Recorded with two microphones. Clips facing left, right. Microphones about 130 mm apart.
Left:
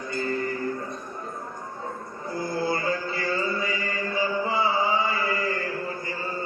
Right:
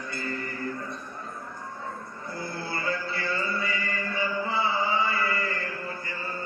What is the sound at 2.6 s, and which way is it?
Music, 40° left (ahead or behind).